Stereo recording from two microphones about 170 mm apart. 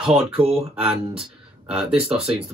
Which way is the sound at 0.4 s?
35° right (ahead or behind).